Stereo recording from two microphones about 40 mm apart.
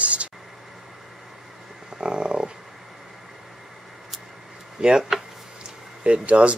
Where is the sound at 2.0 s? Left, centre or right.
Right.